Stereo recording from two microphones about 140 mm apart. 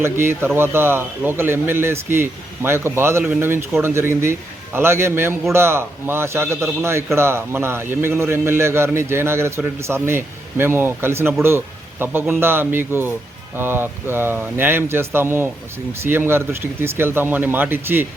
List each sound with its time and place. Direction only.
0.0 s a man's voice: 15° right (ahead or behind)